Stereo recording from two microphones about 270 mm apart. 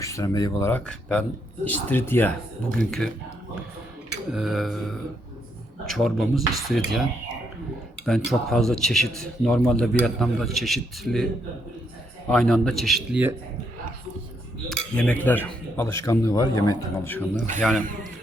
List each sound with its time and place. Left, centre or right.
0.0 s a man's voice: centre
4.3 s a man's voice: centre
12.3 s a man's voice: centre
14.9 s speech: centre
17.3 s speech: right
17.6 s a man's voice: centre